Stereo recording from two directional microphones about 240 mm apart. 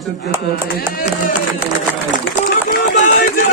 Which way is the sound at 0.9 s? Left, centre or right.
Left.